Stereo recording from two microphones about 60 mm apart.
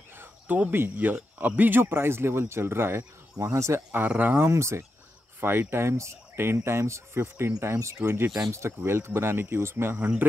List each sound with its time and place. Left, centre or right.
0.1 s speech: right
3.3 s speech: right
3.9 s speech: right
4.5 s speech: right
5.4 s speech: right
7.6 s speech: right
9.9 s speech: right